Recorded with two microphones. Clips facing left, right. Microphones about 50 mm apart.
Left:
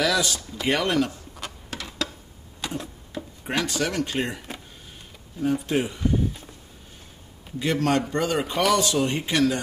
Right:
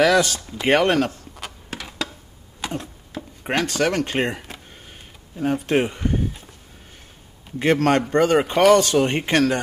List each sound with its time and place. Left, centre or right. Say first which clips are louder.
0.0 s speech: right 7 dB; right
1.3 s a sound: right 2 dB; centre
3.4 s speech: right 5 dB; right
5.4 s speech: right 4 dB; right
7.5 s speech: right 5 dB; right